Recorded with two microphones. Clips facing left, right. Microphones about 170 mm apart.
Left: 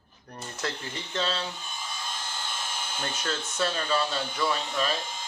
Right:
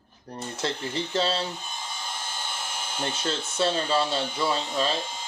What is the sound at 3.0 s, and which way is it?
Speech, 30° right (ahead or behind).